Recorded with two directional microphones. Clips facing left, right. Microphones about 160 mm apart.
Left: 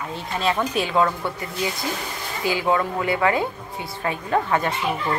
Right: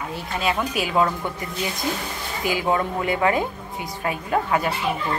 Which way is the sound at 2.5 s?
20° right (ahead or behind).